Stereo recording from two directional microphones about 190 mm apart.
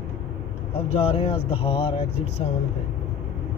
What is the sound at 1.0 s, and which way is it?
Speech, 30° left (ahead or behind).